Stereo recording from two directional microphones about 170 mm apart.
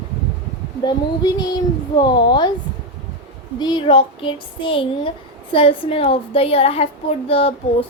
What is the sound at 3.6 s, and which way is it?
Speech, 30° left (ahead or behind).